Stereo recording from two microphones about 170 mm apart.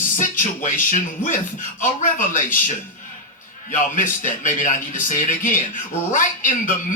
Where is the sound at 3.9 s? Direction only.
50° left (ahead or behind).